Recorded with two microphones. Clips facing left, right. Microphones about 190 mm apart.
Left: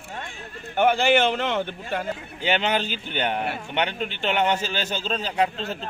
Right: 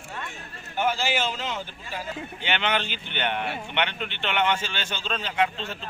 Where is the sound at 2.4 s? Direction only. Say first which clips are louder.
Left 4 dB; 40° left (ahead or behind).